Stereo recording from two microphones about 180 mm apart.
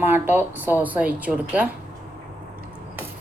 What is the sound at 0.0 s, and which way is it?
Speech, 10° right (ahead or behind).